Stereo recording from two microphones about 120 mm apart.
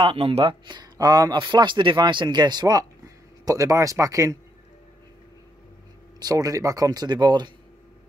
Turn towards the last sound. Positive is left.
turn(degrees=-40)  # may be behind; listen again after turning